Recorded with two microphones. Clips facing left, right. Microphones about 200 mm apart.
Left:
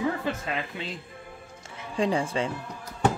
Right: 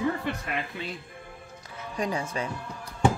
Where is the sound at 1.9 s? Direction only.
30° left (ahead or behind).